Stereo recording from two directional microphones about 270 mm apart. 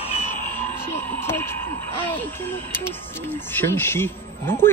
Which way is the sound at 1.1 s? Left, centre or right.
Centre.